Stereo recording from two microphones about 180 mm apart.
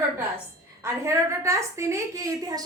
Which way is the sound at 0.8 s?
15° right (ahead or behind).